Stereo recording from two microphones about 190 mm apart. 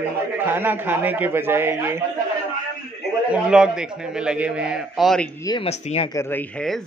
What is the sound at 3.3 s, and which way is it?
A man's voice, 5° right (ahead or behind).